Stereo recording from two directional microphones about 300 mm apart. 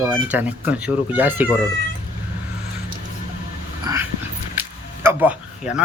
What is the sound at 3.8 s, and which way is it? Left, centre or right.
Dog, centre.